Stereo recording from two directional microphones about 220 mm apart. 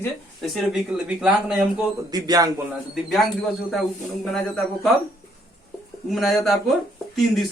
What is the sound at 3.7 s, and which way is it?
Speech, centre (ahead or behind).